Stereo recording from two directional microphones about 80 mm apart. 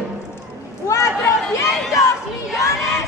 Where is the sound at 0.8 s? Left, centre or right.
Left.